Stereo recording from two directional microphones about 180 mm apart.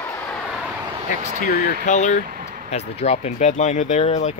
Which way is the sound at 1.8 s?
40° left (ahead or behind).